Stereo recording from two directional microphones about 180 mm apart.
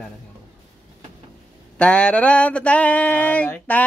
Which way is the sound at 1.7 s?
5° left (ahead or behind).